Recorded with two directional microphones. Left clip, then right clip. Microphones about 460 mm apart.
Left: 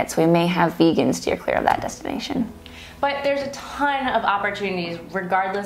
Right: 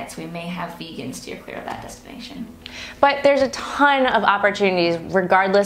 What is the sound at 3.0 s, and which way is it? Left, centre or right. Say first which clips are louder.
A woman's voice: right 6 dB; right.